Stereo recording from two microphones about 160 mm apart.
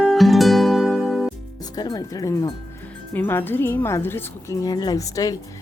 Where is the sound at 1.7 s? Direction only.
25° left (ahead or behind).